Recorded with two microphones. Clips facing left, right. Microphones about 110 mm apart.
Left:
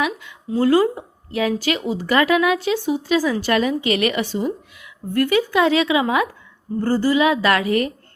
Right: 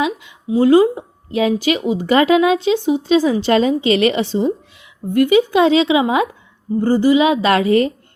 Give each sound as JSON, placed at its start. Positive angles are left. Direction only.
{"t": 0.0, "sound": "a woman's voice", "side_deg": -20}